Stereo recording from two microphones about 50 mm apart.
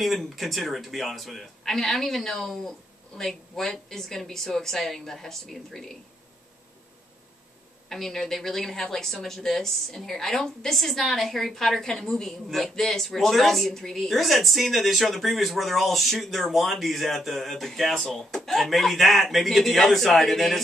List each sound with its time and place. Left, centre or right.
0.0 s a woman's voice: centre
7.9 s speech: centre